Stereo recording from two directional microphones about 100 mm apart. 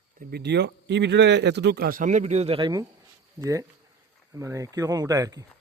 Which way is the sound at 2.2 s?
90° right.